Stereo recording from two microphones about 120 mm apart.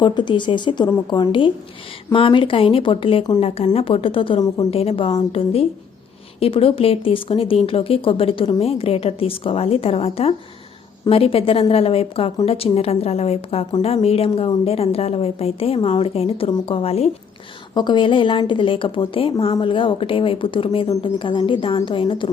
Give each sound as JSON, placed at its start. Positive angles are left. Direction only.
{"t": 0.0, "sound": "speech", "side_deg": 40}
{"t": 0.9, "sound": "a woman's voice", "side_deg": 30}
{"t": 2.1, "sound": "a woman's voice", "side_deg": 45}
{"t": 17.7, "sound": "speech", "side_deg": 40}